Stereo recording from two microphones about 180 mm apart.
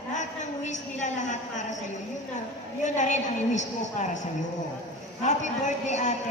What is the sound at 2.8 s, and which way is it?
A woman's voice, 40° left (ahead or behind).